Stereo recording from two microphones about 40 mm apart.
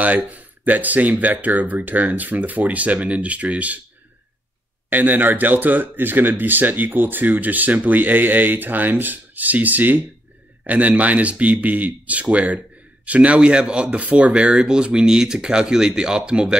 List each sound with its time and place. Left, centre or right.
0.0 s speech: right
4.8 s speech: right
13.9 s speech: right